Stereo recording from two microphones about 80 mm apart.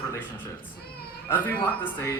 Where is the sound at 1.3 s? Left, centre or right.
Left.